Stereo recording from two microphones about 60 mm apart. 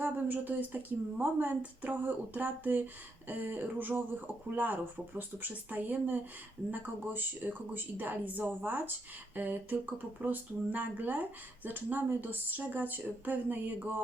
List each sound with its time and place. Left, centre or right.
0.0 s a woman's voice: right